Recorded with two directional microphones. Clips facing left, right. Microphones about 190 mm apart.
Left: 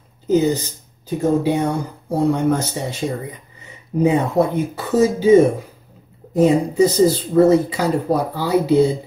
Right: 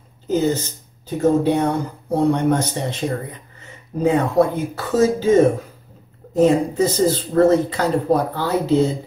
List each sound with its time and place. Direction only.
0.3 s speech: 15° left (ahead or behind)